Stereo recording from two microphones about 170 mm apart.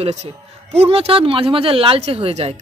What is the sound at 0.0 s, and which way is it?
A man's voice, 45° right (ahead or behind).